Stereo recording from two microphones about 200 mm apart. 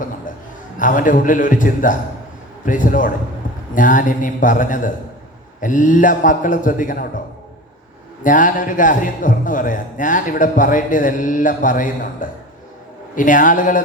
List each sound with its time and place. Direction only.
0.8 s a man's voice: 40° left (ahead or behind)
8.2 s a man's voice: 40° left (ahead or behind)